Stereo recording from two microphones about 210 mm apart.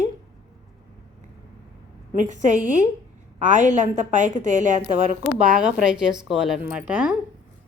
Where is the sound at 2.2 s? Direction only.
35° right (ahead or behind).